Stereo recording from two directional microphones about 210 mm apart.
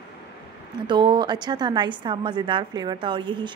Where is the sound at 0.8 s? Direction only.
20° right (ahead or behind).